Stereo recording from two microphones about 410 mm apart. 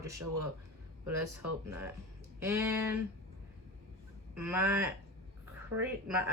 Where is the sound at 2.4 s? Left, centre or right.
Centre.